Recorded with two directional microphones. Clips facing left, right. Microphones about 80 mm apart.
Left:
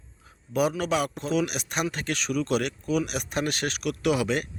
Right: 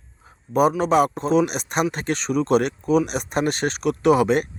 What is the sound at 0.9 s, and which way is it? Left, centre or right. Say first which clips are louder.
Speech: right 8 dB; right.